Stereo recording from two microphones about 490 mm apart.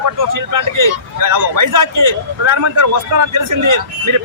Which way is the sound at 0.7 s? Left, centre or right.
Right.